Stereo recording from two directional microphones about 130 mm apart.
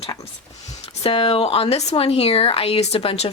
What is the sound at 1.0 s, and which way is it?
Speech, 45° left (ahead or behind).